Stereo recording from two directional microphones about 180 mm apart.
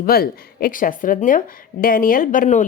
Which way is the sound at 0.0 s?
55° left (ahead or behind).